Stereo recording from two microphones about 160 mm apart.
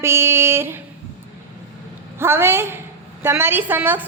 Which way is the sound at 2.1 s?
15° right (ahead or behind).